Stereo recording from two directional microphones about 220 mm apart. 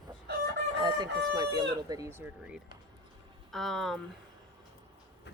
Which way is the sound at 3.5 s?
Centre (ahead or behind).